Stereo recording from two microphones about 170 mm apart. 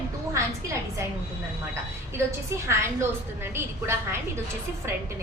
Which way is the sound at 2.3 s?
15° right (ahead or behind).